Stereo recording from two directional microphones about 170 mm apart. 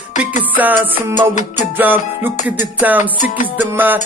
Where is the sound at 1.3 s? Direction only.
45° left (ahead or behind).